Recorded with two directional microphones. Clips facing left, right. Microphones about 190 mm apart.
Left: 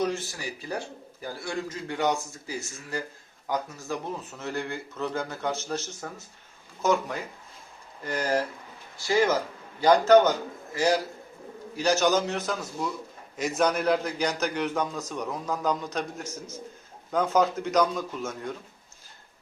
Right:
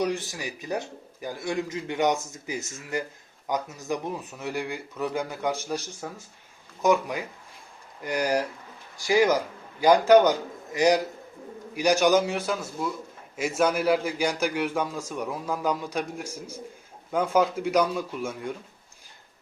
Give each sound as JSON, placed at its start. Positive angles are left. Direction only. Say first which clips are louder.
{"t": 0.0, "sound": "a man's voice", "louder": "right 1 dB", "side_deg": -15}